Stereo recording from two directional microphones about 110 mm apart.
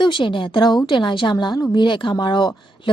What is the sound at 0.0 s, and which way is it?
A woman's voice, 45° left (ahead or behind).